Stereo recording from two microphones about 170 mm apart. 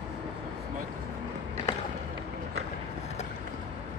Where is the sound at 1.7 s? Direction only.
15° left (ahead or behind).